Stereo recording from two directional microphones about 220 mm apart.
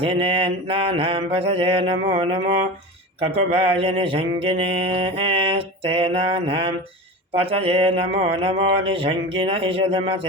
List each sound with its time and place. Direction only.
0.0 s mantra: 25° right (ahead or behind)